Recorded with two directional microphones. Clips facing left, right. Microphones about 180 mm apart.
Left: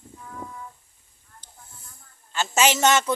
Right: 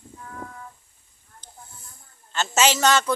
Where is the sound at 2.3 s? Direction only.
15° left (ahead or behind).